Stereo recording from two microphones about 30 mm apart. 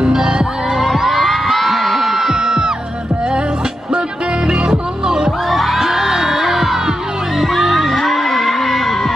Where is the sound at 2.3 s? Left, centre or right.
Right.